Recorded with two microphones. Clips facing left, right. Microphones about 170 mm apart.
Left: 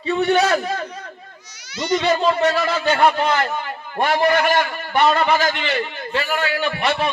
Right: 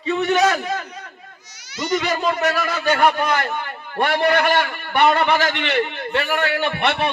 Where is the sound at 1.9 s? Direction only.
30° left (ahead or behind).